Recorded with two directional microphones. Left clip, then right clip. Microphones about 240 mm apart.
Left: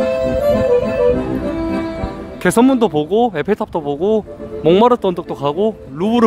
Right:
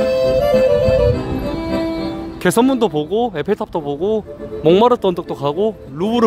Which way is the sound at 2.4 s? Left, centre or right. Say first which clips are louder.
Left 2 dB; centre.